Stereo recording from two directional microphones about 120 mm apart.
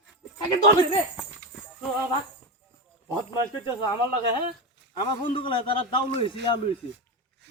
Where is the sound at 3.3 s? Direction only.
40° left (ahead or behind).